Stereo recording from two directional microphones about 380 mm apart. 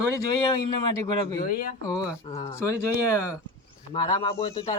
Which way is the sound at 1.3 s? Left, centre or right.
Left.